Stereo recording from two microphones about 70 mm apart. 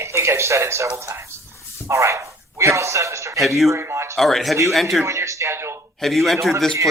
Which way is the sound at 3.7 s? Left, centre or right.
Right.